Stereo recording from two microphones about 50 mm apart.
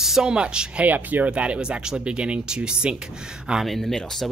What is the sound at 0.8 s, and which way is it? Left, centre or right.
Speech, right.